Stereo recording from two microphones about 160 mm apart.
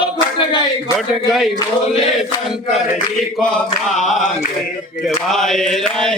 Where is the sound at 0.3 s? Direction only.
30° left (ahead or behind).